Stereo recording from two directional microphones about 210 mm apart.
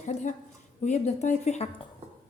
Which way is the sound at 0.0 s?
35° left (ahead or behind).